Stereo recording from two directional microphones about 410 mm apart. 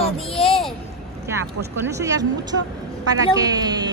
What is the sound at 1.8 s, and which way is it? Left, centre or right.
Speech, centre.